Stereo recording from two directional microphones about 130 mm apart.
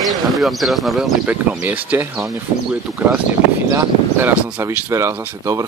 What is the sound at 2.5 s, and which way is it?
Speech, 25° right (ahead or behind).